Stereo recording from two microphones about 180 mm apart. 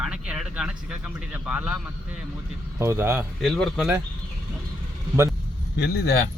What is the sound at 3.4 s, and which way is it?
Speech, centre (ahead or behind).